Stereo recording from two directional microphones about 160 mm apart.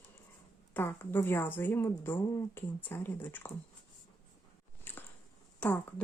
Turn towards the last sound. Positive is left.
turn(degrees=10)  # may be behind; listen again after turning